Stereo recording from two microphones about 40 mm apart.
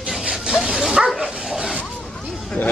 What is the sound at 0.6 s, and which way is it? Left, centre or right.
Bow-wow, centre.